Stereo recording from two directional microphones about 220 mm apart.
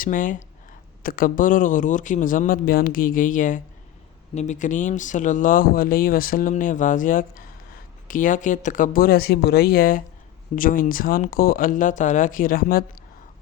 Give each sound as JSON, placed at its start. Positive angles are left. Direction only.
{"t": 0.0, "sound": "speech", "side_deg": 35}